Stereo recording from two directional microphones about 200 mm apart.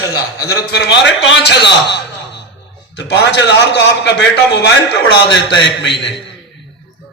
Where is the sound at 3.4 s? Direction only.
60° left (ahead or behind).